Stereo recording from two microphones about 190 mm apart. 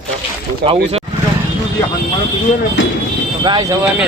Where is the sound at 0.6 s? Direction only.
30° right (ahead or behind).